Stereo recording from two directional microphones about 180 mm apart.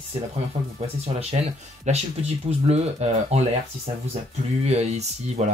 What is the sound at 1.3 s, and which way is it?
Speech, 35° right (ahead or behind).